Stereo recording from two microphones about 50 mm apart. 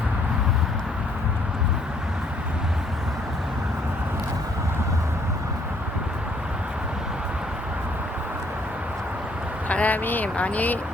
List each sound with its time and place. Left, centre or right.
9.6 s speech: left